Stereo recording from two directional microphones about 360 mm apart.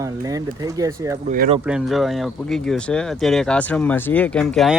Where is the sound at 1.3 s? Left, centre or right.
Right.